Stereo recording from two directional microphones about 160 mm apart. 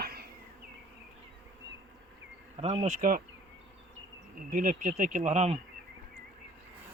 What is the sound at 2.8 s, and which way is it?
Speech, 55° right (ahead or behind).